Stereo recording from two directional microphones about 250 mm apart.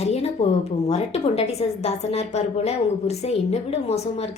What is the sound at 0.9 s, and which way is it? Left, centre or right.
A woman's voice, left.